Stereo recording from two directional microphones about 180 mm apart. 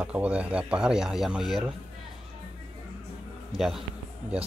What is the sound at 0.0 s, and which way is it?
Speech, 5° right (ahead or behind).